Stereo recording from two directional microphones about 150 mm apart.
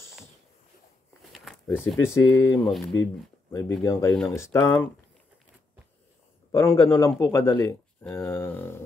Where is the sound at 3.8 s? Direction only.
15° left (ahead or behind).